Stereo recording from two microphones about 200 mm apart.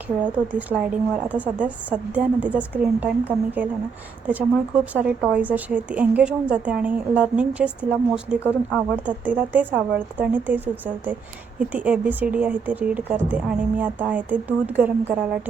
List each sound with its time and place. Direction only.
0.3 s a woman's voice: 5° right (ahead or behind)